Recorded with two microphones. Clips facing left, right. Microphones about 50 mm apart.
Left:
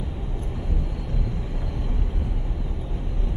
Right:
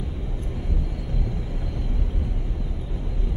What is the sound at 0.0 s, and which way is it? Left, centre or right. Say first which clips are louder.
Vehicle: even; centre.